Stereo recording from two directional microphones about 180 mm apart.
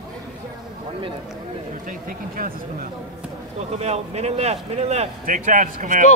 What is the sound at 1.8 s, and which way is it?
Speech, 50° right (ahead or behind).